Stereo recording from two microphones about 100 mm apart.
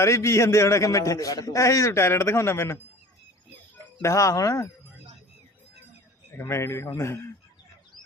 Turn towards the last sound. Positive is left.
turn(degrees=30)  # may be behind; listen again after turning